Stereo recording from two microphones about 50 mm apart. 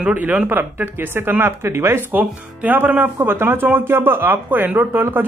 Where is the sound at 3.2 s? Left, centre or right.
Right.